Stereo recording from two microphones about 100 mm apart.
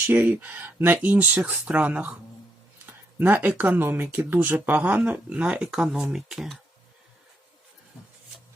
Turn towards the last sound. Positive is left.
turn(degrees=0)  # may be behind; listen again after turning